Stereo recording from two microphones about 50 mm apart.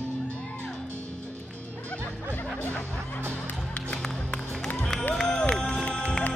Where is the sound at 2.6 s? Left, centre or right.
Left.